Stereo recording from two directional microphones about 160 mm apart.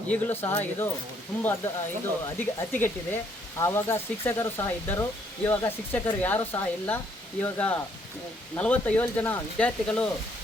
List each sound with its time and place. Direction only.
0.1 s speech: 10° left (ahead or behind)